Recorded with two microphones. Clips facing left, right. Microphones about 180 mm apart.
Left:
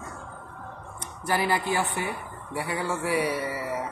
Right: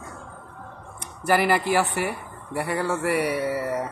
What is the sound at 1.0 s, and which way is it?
Speech, 75° right (ahead or behind).